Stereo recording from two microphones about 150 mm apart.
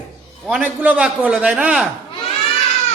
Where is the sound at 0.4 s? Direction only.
10° right (ahead or behind).